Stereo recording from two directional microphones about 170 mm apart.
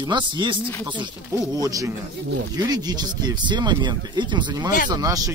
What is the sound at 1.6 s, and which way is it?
Speech, 20° right (ahead or behind).